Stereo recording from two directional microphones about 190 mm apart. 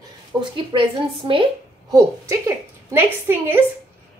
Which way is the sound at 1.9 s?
15° right (ahead or behind).